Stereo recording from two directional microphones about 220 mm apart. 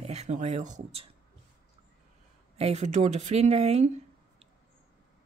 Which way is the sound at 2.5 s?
30° right (ahead or behind).